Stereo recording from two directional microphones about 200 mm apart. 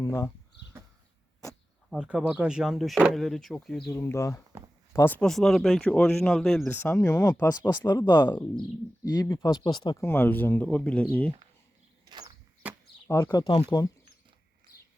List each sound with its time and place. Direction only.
0.0 s speech: 15° left (ahead or behind)
1.9 s speech: 5° right (ahead or behind)
3.9 s speech: 15° left (ahead or behind)
12.0 s a sound: 20° right (ahead or behind)
12.6 s chop: 5° right (ahead or behind)
13.1 s speech: 15° left (ahead or behind)
13.4 s speech: 25° left (ahead or behind)